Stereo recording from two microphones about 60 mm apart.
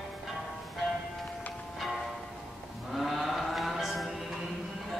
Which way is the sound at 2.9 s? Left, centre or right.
Centre.